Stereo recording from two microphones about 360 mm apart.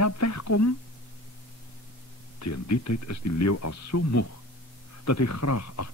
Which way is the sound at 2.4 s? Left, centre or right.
Left.